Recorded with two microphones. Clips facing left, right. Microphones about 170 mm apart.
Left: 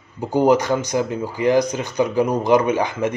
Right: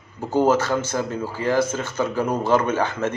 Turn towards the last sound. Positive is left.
turn(degrees=15)  # may be behind; listen again after turning